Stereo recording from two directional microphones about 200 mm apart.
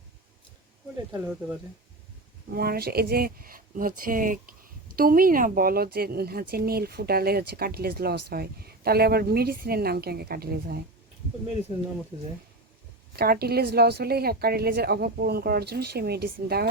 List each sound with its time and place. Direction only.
1.2 s speech: 5° right (ahead or behind)
2.6 s speech: 50° right (ahead or behind)
13.1 s speech: 50° right (ahead or behind)